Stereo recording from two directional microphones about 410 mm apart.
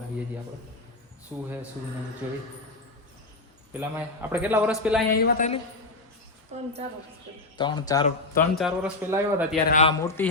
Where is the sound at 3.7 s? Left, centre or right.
Centre.